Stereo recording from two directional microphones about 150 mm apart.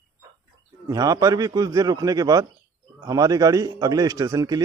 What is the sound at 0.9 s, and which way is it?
A man's voice, 25° right (ahead or behind).